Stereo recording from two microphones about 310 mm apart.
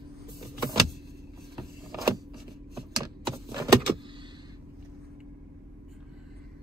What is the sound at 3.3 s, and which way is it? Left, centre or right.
Keys jangling, centre.